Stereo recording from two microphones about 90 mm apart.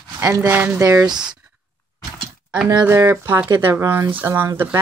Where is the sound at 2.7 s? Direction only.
25° right (ahead or behind).